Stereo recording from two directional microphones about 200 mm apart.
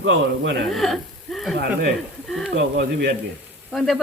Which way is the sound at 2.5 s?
55° right (ahead or behind).